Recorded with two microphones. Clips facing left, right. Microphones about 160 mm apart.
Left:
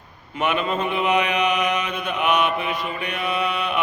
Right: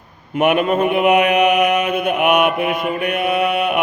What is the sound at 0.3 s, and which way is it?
Mantra, 55° right (ahead or behind).